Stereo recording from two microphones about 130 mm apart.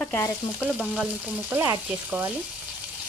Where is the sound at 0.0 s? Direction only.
15° left (ahead or behind).